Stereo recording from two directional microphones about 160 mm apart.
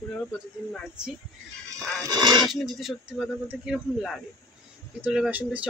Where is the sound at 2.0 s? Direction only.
25° right (ahead or behind).